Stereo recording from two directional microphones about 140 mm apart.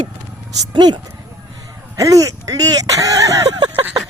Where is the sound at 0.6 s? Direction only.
30° right (ahead or behind).